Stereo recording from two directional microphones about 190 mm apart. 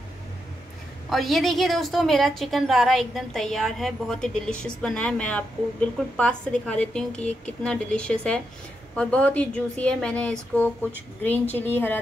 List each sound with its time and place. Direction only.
1.1 s a woman's voice: centre (ahead or behind)